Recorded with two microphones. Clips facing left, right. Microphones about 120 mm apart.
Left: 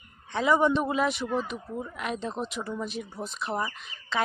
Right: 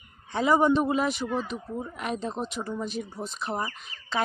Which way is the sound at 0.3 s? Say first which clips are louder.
Right 1 dB; centre (ahead or behind).